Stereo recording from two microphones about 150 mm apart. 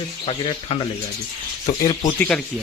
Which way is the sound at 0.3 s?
40° left (ahead or behind).